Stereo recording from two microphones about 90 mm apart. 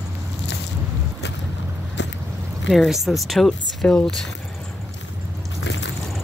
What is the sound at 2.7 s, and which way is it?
Speech, centre (ahead or behind).